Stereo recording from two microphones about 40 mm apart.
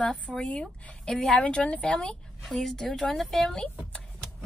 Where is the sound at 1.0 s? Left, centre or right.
Centre.